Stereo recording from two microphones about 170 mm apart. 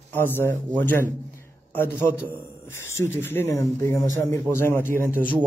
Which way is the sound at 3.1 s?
15° left (ahead or behind).